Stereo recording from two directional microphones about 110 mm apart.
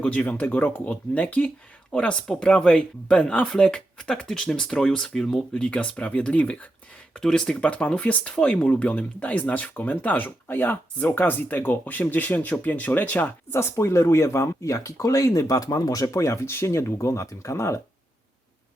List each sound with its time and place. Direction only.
0.0 s speech: 10° left (ahead or behind); by 17.7 s 25° left (ahead or behind)